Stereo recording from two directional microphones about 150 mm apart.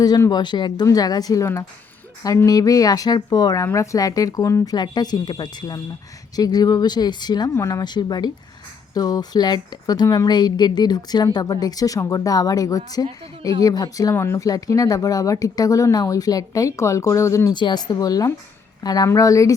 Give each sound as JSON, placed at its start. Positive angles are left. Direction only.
{"t": 0.0, "sound": "speech", "side_deg": 25}